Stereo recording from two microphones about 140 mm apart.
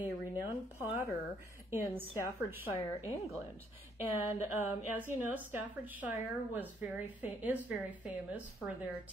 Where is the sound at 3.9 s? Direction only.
15° right (ahead or behind).